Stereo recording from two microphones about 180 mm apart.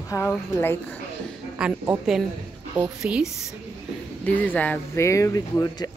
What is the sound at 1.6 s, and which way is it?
A woman's voice, 5° right (ahead or behind).